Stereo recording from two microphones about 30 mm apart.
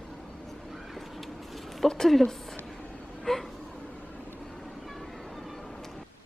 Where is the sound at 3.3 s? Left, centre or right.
Centre.